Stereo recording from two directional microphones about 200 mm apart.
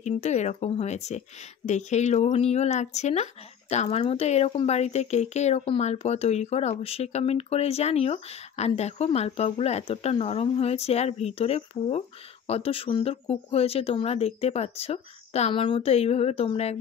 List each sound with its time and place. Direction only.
0.0 s speech: 35° left (ahead or behind)